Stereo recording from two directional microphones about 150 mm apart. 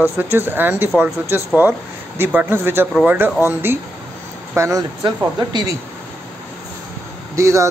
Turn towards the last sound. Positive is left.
turn(degrees=-20)  # may be behind; listen again after turning